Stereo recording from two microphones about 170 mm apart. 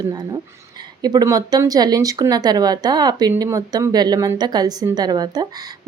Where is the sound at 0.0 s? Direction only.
25° right (ahead or behind).